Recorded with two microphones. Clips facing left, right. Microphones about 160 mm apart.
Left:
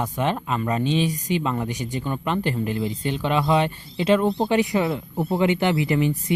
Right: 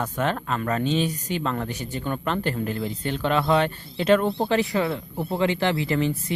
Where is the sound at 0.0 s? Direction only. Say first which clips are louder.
Left 1 dB; 10° left (ahead or behind).